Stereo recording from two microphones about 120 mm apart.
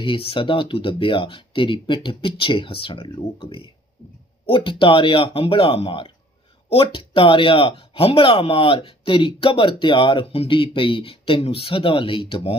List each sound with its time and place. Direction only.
0.0 s speech: 50° left (ahead or behind)